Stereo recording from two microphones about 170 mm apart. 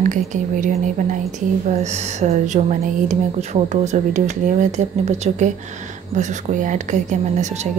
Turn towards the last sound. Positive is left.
turn(degrees=-45)  # may be behind; listen again after turning